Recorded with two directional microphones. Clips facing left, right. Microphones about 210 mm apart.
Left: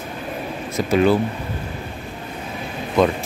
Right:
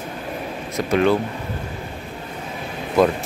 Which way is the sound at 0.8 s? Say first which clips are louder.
Left 1 dB; 5° left (ahead or behind).